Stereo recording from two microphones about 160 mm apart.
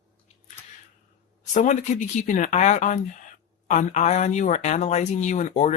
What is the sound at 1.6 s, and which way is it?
Speech, 50° left (ahead or behind).